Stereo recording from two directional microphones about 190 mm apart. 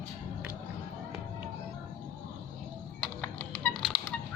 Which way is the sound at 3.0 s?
5° left (ahead or behind).